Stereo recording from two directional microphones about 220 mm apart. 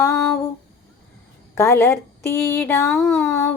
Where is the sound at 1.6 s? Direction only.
10° left (ahead or behind).